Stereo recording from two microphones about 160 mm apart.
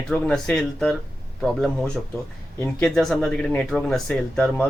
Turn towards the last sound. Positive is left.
turn(degrees=5)  # may be behind; listen again after turning